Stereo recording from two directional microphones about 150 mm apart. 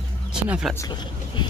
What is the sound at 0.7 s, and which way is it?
Speech, 30° left (ahead or behind).